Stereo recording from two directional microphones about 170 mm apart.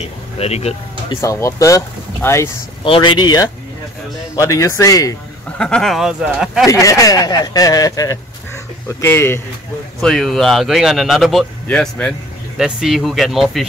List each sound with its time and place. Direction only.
0.0 s speech: 40° left (ahead or behind)
1.2 s speech: 20° left (ahead or behind)
2.8 s speech: 30° left (ahead or behind)
5.6 s speech: 5° left (ahead or behind)
6.6 s speech: 20° left (ahead or behind); by 13.7 s centre (ahead or behind)